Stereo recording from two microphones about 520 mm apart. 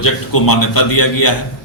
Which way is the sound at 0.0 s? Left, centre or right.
Left.